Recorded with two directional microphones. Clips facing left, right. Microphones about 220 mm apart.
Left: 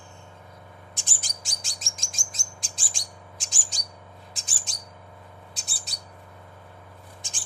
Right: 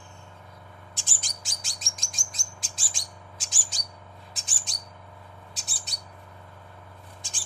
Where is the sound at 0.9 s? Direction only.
15° left (ahead or behind).